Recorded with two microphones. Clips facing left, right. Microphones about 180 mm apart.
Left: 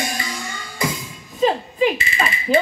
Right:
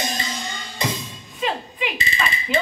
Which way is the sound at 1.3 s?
35° left (ahead or behind).